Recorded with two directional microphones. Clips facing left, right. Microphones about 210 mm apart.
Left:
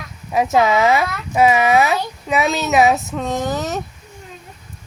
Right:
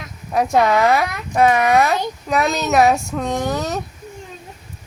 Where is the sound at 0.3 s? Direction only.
5° left (ahead or behind).